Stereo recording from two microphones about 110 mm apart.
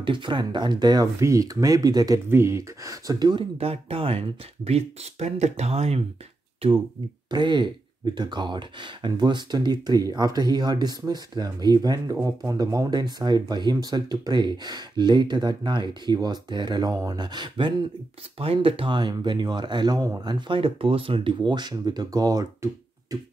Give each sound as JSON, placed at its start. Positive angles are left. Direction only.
{"t": 0.0, "sound": "speech", "side_deg": -45}
{"t": 2.2, "sound": "speech", "side_deg": -25}
{"t": 3.5, "sound": "speech", "side_deg": -65}
{"t": 7.2, "sound": "speech", "side_deg": -45}
{"t": 18.4, "sound": "speech", "side_deg": -55}